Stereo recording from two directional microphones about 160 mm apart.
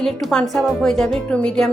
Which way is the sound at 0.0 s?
Centre (ahead or behind).